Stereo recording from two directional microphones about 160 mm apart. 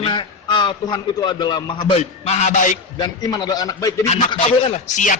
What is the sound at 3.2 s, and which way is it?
Speech, 25° left (ahead or behind).